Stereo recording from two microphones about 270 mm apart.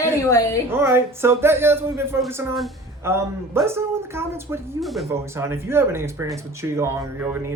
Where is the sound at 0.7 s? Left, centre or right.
Centre.